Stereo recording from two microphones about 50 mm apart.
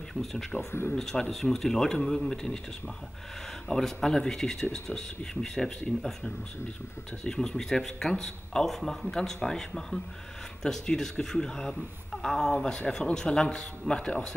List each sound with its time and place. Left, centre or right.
0.2 s a man's voice: centre
0.7 s speech: left
0.9 s a man's voice: centre
3.6 s a man's voice: centre